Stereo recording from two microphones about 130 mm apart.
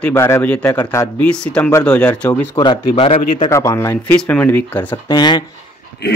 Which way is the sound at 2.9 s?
50° left (ahead or behind).